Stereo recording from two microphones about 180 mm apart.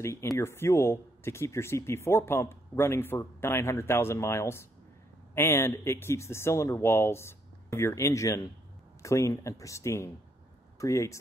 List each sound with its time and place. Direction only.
0.0 s speech: 15° left (ahead or behind)